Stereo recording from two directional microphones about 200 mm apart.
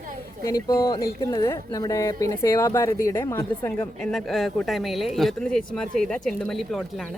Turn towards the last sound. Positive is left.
turn(degrees=0)  # may be behind; listen again after turning